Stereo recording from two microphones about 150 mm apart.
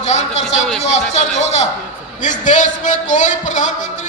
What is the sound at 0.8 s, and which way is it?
A man's voice, 50° left (ahead or behind).